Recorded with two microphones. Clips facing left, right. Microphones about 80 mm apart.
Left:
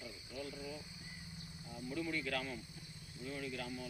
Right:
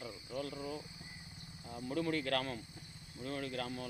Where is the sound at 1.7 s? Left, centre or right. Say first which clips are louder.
Right 5 dB; right.